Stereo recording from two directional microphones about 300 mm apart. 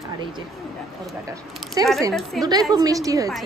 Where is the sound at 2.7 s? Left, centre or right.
Centre.